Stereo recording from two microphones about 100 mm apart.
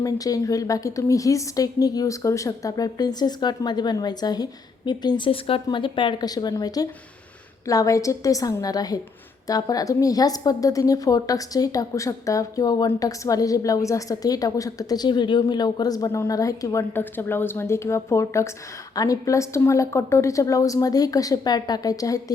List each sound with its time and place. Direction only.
0.0 s a woman's voice: 35° left (ahead or behind); by 5.6 s 65° left (ahead or behind)
5.6 s a woman's voice: 55° left (ahead or behind); by 16.8 s 35° left (ahead or behind)
16.9 s a woman's voice: 20° left (ahead or behind)